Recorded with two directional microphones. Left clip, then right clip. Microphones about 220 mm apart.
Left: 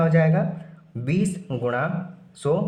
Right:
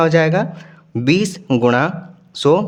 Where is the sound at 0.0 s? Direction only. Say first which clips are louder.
Right 8 dB; 45° right (ahead or behind).